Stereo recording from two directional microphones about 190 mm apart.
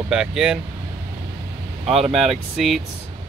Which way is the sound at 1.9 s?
Centre (ahead or behind).